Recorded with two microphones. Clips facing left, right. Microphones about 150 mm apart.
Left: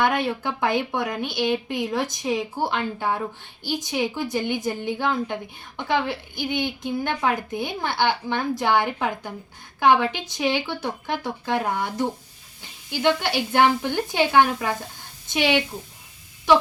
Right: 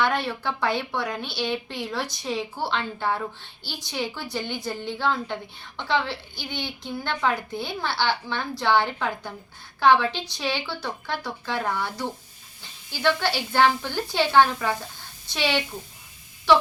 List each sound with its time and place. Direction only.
0.1 s a woman's voice: 20° left (ahead or behind)
3.7 s a woman's voice: 45° left (ahead or behind)
3.9 s a woman's voice: 15° left (ahead or behind)